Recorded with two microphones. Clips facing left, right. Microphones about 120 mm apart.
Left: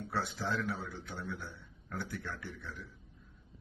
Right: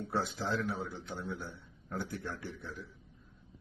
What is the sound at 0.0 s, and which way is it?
A man's voice, 30° right (ahead or behind).